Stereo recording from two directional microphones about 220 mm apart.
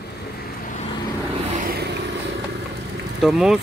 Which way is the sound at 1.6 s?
45° right (ahead or behind).